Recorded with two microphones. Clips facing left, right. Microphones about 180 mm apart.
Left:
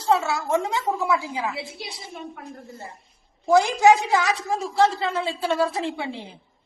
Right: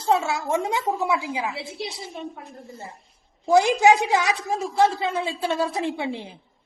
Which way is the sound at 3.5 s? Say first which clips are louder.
Even; 15° right (ahead or behind).